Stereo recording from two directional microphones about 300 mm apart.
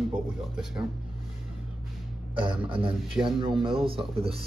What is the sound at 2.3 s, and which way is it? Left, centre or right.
Speech, centre.